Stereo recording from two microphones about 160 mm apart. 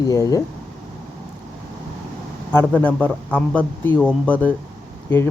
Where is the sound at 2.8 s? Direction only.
10° left (ahead or behind).